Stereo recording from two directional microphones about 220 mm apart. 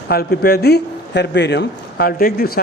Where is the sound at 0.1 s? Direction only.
45° left (ahead or behind).